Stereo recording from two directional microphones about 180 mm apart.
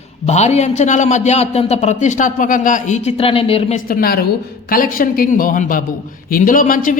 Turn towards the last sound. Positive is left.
turn(degrees=50)  # may be behind; listen again after turning